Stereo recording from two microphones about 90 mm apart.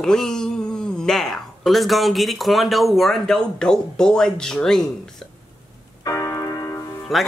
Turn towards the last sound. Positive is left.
turn(degrees=0)  # may be behind; listen again after turning